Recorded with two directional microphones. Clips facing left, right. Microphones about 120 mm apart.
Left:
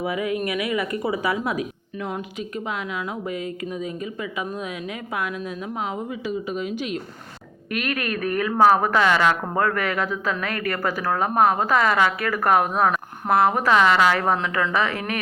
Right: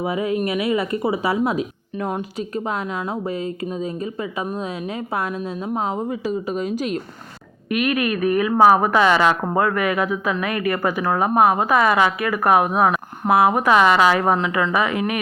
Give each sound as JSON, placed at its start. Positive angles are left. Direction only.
{"t": 0.0, "sound": "a woman's voice", "side_deg": -30}
{"t": 2.4, "sound": "a woman's voice", "side_deg": -40}
{"t": 7.7, "sound": "a woman's voice", "side_deg": -15}